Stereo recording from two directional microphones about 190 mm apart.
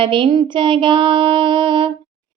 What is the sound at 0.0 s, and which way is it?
Mantra, 25° right (ahead or behind).